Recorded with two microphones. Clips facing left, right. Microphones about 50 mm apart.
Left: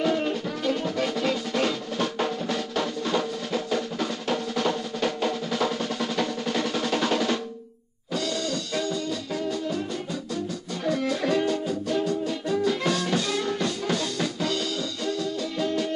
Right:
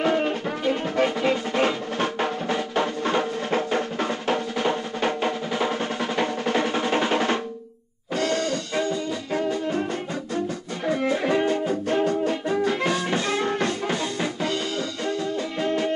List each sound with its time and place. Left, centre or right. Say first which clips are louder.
0.0 s music: right 2 dB; right
8.2 s music: right 5 dB; right
10.9 s music: right 2 dB; right
15.6 s music: right 2 dB; right